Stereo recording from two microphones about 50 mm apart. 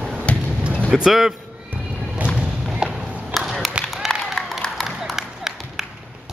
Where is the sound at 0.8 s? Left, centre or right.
Centre.